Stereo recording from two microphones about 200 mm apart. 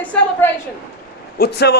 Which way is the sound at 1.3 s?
55° left (ahead or behind).